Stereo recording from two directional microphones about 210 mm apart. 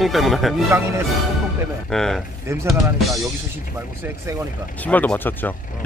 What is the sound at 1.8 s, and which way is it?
Speech, centre (ahead or behind).